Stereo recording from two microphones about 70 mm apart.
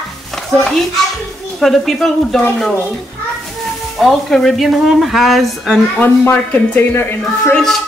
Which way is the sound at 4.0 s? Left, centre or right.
Centre.